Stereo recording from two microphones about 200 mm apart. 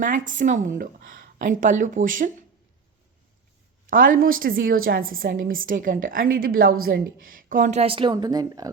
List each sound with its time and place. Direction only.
0.0 s speech: 40° right (ahead or behind)
3.8 s a woman's voice: 45° right (ahead or behind); by 8.7 s 20° right (ahead or behind)